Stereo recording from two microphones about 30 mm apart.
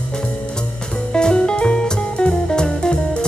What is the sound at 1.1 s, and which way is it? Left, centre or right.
Music, left.